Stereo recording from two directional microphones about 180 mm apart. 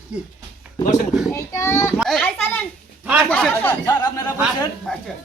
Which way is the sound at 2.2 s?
10° left (ahead or behind).